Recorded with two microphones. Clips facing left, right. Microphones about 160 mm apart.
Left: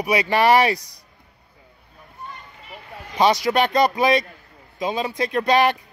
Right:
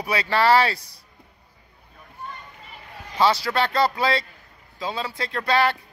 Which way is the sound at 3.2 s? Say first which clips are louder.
Left 3 dB; 15° left (ahead or behind).